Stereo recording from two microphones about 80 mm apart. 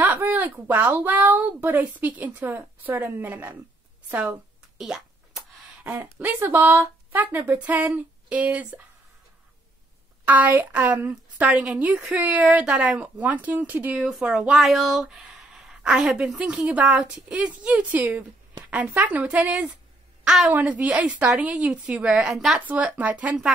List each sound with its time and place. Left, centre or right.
0.0 s a woman's voice: right
4.7 s a sound: centre
6.4 s a woman's voice: right
10.2 s a woman's voice: right
14.0 s a woman's voice: centre
22.7 s a woman's voice: centre